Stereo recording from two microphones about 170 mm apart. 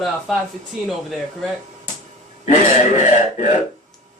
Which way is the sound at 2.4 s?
45° left (ahead or behind).